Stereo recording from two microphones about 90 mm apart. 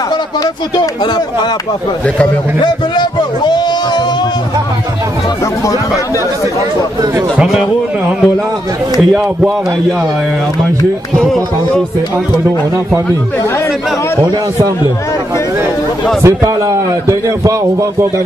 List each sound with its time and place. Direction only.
2.6 s a sound: 55° left (ahead or behind)
7.3 s speech: centre (ahead or behind)
11.1 s speech: 5° left (ahead or behind)
16.2 s a man's voice: 30° right (ahead or behind)